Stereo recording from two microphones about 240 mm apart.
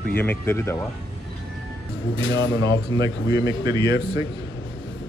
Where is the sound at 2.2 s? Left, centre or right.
Left.